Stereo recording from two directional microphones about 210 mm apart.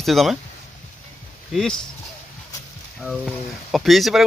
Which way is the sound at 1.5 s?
Centre (ahead or behind).